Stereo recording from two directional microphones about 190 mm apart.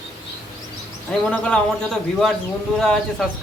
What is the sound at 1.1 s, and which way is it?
A man's voice, 5° left (ahead or behind).